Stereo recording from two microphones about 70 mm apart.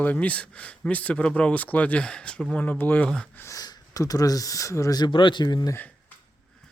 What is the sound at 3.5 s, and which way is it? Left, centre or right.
Speech, left.